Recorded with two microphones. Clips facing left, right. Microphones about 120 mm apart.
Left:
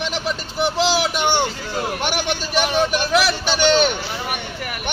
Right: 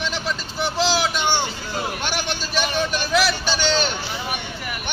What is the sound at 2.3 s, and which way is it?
Speech, 65° left (ahead or behind).